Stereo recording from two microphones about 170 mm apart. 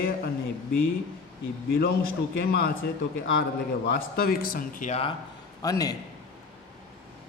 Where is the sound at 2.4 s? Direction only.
70° left (ahead or behind).